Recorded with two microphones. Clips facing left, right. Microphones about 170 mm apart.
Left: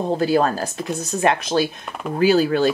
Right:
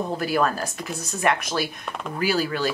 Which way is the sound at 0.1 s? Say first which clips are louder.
Left 7 dB; 30° left (ahead or behind).